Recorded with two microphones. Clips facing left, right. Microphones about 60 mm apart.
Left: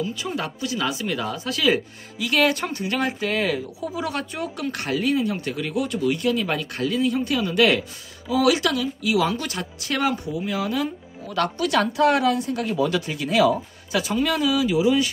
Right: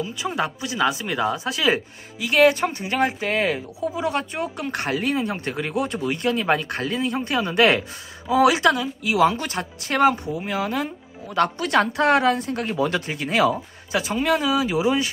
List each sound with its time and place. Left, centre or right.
0.0 s speech: centre; by 10.9 s right
11.2 s speech: right